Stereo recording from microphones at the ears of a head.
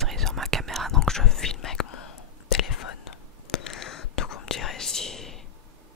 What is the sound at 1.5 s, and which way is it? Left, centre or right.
Whispering, left.